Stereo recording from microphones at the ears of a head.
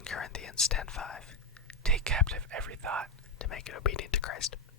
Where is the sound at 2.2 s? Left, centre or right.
Right.